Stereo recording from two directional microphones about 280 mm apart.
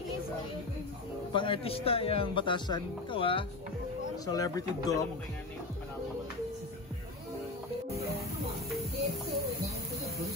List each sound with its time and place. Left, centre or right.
1.3 s a man's voice: centre